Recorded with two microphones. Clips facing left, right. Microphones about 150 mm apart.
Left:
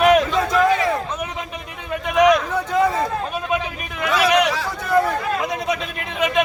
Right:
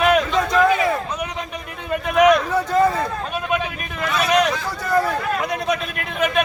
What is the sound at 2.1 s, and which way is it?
A man's voice, centre (ahead or behind).